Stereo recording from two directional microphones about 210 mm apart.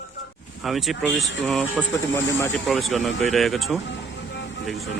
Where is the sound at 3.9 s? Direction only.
55° left (ahead or behind).